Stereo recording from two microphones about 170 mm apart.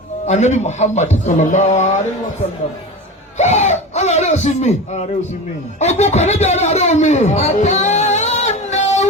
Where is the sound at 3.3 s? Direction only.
45° left (ahead or behind).